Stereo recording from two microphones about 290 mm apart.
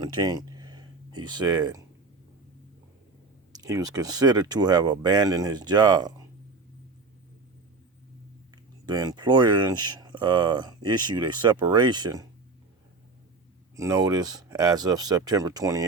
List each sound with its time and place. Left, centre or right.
0.0 s speech: centre
3.5 s speech: centre
8.9 s speech: centre
13.7 s speech: centre